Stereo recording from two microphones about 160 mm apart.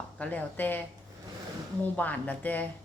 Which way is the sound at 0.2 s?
10° left (ahead or behind).